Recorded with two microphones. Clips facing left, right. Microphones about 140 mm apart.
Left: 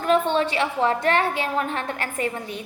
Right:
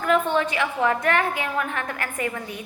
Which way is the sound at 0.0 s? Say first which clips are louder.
Left 1 dB; 25° left (ahead or behind).